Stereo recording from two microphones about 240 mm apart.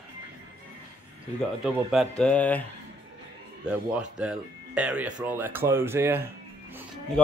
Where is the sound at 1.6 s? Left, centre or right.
Centre.